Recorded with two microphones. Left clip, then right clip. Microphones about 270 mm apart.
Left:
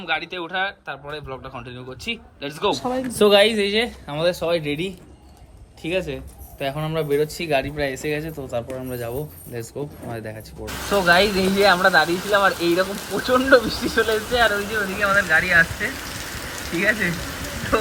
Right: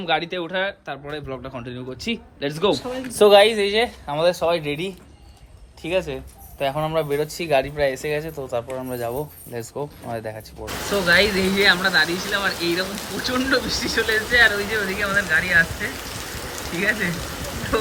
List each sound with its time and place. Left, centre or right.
0.0 s speech: centre
2.7 s speech: left
3.1 s speech: centre